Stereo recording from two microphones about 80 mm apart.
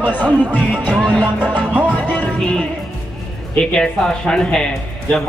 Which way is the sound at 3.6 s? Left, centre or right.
Centre.